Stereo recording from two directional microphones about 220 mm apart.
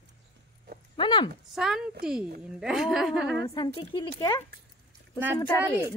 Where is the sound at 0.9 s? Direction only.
20° left (ahead or behind).